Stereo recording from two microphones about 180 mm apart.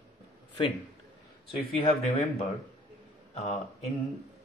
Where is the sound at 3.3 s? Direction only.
40° left (ahead or behind).